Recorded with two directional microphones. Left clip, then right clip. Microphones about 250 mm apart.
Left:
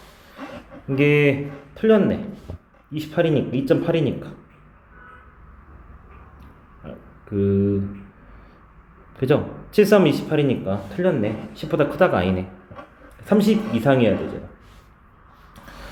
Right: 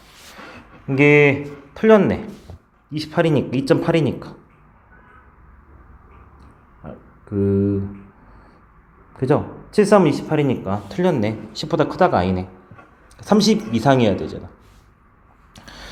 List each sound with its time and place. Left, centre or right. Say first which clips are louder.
0.9 s speech: right 4 dB; centre
6.8 s a sound: right 1 dB; centre
9.1 s speech: right 1 dB; centre
15.5 s vehicle: right 2 dB; right